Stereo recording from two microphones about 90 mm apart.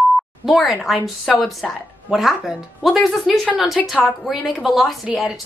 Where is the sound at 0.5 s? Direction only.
Centre (ahead or behind).